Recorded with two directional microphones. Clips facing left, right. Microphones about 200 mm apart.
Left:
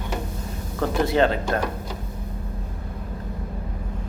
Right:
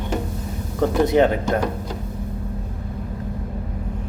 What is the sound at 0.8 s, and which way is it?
Speech, 15° right (ahead or behind).